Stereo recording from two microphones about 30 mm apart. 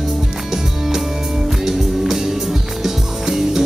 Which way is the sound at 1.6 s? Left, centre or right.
Centre.